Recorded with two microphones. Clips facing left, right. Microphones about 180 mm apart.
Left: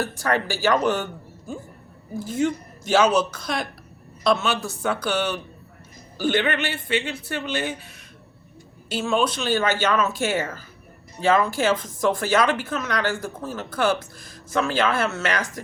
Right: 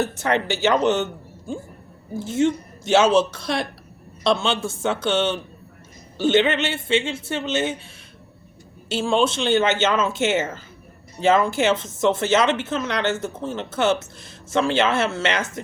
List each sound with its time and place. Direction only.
0.0 s speech: 20° right (ahead or behind)
8.9 s speech: 30° right (ahead or behind)